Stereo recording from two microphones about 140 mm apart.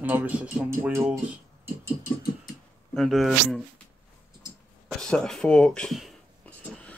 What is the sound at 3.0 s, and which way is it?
Speech, centre (ahead or behind).